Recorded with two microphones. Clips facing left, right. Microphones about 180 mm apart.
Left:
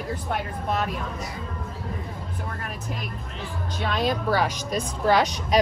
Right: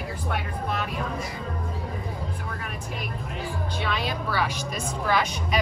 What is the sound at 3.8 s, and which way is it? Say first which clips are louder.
A woman's voice: left 7 dB; 45° left (ahead or behind).